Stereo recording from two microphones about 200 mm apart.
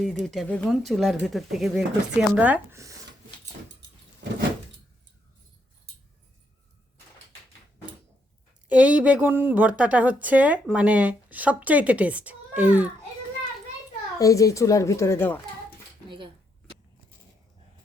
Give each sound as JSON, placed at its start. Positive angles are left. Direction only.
{"t": 0.3, "sound": "speech", "side_deg": 5}
{"t": 3.8, "sound": "keys jangling", "side_deg": -60}
{"t": 8.7, "sound": "a woman's voice", "side_deg": -5}
{"t": 14.2, "sound": "a child's voice", "side_deg": 15}
{"t": 16.0, "sound": "speech", "side_deg": -25}